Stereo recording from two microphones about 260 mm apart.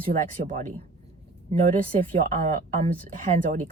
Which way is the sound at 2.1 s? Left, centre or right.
Right.